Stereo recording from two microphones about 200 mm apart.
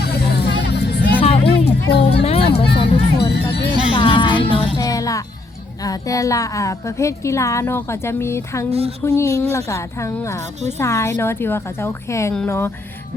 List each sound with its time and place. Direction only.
0.0 s music: 55° left (ahead or behind)
1.2 s music: 30° left (ahead or behind)
1.9 s speech: 55° left (ahead or behind)
2.2 s music: 30° left (ahead or behind)
2.6 s speech: 25° left (ahead or behind)
3.2 s music: 55° left (ahead or behind)
3.9 s music: 25° left (ahead or behind)
5.8 s a woman's voice: 15° left (ahead or behind)